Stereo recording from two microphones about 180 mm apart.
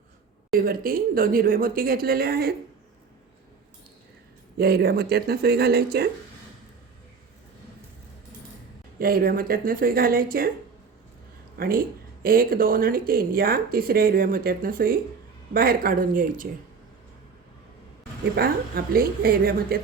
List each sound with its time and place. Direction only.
0.6 s speech: 55° right (ahead or behind)
4.5 s speech: 60° right (ahead or behind)
9.0 s speech: 55° right (ahead or behind)
11.5 s speech: 55° right (ahead or behind)
18.3 s speech: 55° right (ahead or behind)